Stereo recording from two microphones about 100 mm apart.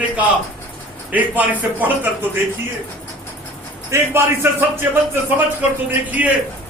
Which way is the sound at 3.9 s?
25° right (ahead or behind).